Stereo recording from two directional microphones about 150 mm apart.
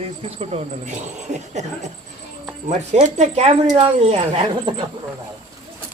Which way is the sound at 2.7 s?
50° right (ahead or behind).